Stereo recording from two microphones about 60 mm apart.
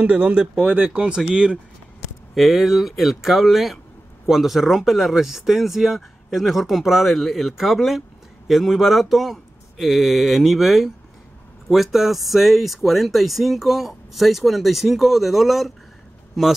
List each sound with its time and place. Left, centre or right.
0.0 s speech: right
0.6 s speech: right
0.8 s speech: centre
2.3 s speech: centre